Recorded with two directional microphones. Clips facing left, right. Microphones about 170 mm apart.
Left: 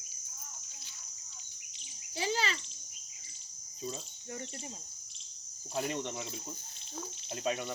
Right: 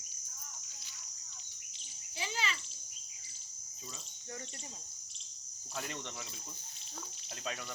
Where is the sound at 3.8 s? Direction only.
30° left (ahead or behind).